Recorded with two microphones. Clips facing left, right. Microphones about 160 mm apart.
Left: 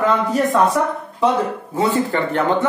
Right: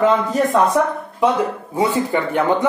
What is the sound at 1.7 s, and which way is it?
Speech, 15° right (ahead or behind).